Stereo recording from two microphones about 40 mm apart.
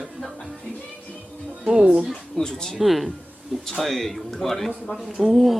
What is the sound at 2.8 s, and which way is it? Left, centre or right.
Speech, centre.